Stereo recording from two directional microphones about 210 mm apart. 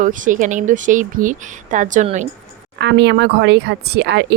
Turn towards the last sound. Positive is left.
turn(degrees=-50)  # may be behind; listen again after turning